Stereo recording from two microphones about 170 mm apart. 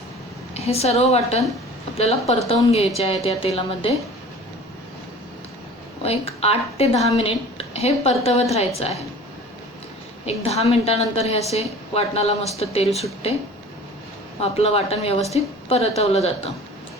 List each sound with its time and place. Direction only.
0.5 s a woman's voice: 40° left (ahead or behind)
6.0 s a woman's voice: 35° left (ahead or behind)
10.2 s a woman's voice: 35° left (ahead or behind)
14.4 s a woman's voice: 35° left (ahead or behind)